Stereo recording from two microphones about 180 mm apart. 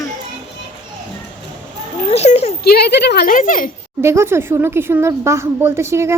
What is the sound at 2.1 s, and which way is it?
Speech, 35° left (ahead or behind).